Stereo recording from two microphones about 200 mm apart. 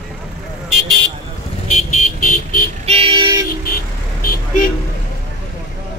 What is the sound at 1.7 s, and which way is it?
Vehicle, 40° left (ahead or behind).